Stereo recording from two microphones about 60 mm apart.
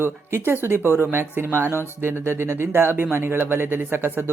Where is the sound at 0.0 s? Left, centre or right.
Right.